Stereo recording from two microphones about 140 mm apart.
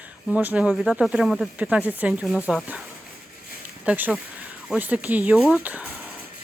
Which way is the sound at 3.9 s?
10° right (ahead or behind).